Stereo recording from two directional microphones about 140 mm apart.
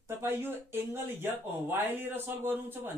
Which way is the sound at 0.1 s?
15° right (ahead or behind).